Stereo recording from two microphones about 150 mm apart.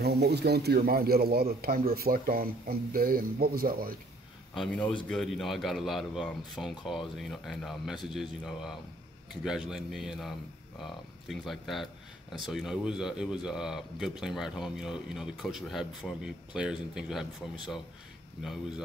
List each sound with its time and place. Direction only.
0.0 s speech: 90° right
4.6 s speech: 5° left (ahead or behind)